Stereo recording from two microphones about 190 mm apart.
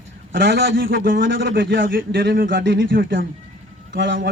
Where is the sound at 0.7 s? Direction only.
50° right (ahead or behind).